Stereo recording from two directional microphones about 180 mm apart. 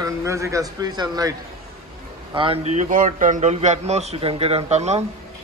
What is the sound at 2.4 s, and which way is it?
A man's voice, 35° right (ahead or behind).